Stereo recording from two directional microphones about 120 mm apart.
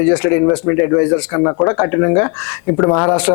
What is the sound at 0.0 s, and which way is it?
A man's voice, 20° left (ahead or behind).